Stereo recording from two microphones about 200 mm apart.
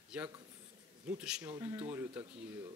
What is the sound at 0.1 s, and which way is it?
Speech, 5° right (ahead or behind).